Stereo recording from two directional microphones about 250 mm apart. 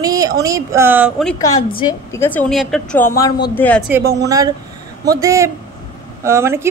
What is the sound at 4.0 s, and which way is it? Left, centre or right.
Speech, right.